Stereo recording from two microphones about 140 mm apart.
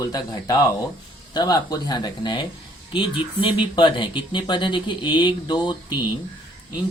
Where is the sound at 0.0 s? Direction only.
25° left (ahead or behind).